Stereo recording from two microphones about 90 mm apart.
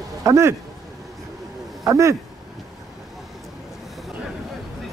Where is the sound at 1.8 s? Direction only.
35° right (ahead or behind).